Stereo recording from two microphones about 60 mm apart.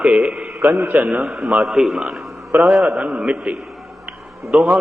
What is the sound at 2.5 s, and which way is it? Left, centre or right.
Speech, right.